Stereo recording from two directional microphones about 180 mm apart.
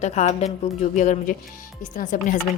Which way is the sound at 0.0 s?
40° left (ahead or behind).